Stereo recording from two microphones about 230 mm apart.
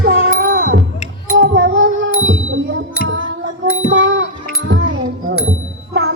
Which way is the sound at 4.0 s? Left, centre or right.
Right.